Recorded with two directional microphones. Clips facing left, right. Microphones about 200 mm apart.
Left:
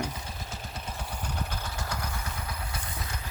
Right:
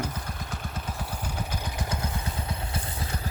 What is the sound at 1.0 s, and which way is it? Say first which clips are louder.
Vehicle: even; 10° right (ahead or behind).